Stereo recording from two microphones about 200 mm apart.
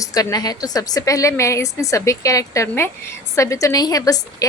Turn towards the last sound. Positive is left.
turn(degrees=20)  # may be behind; listen again after turning